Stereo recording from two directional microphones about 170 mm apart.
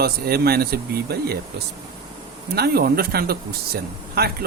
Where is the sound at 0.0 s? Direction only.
65° right (ahead or behind).